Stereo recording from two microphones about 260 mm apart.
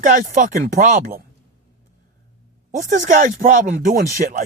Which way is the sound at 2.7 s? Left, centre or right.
Right.